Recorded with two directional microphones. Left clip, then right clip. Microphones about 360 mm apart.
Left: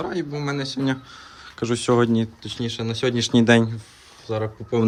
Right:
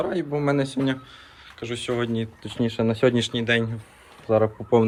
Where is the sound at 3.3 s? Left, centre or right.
Centre.